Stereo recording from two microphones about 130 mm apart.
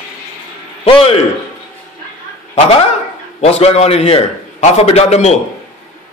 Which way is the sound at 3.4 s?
50° left (ahead or behind).